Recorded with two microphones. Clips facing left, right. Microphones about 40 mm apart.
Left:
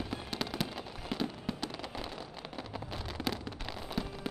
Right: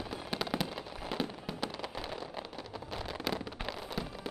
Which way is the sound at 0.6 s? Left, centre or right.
Centre.